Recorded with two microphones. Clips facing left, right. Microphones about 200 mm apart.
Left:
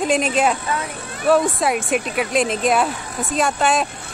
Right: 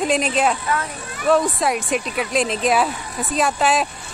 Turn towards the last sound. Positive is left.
turn(degrees=0)  # may be behind; listen again after turning